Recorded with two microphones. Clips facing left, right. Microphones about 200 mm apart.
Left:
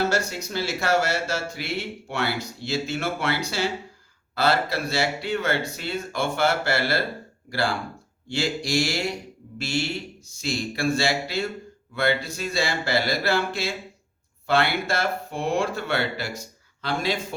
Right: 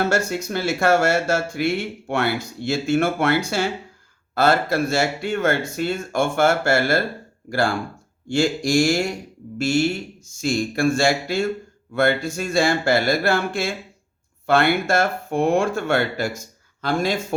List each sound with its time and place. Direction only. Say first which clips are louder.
0.1 s speech: right 4 dB; 55° right (ahead or behind)
8.3 s speech: right 6 dB; 45° right (ahead or behind)